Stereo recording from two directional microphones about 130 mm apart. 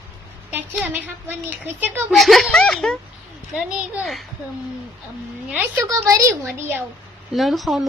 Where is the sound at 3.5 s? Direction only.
10° right (ahead or behind).